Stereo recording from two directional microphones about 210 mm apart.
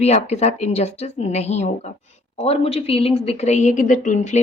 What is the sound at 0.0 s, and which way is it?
Speech, 30° left (ahead or behind).